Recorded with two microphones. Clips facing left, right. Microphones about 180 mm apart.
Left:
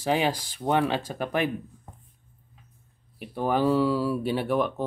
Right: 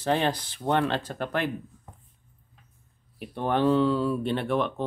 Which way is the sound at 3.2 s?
5° left (ahead or behind).